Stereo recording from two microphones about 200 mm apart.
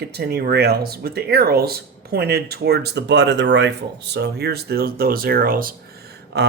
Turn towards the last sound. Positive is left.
turn(degrees=-55)  # may be behind; listen again after turning